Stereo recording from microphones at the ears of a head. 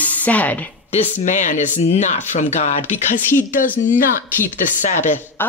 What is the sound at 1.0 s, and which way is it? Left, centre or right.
Speech, left.